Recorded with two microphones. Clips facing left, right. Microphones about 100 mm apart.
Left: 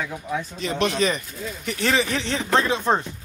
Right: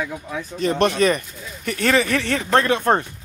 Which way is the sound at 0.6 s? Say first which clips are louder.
Right 6 dB; 50° right (ahead or behind).